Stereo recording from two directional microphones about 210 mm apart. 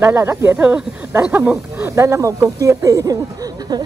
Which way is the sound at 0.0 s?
10° right (ahead or behind).